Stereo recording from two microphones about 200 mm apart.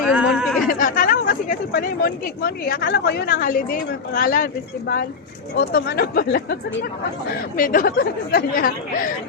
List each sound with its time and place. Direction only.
0.1 s a sound: 5° right (ahead or behind)
0.7 s speech: 45° left (ahead or behind)
5.5 s speech: 50° left (ahead or behind)